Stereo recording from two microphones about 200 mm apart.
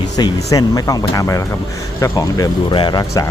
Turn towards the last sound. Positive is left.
turn(degrees=20)  # may be behind; listen again after turning